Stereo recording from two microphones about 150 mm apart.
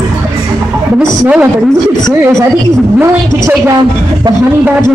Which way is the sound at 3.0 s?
15° right (ahead or behind).